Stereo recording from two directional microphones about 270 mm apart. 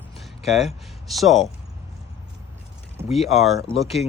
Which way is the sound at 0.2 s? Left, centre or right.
Centre.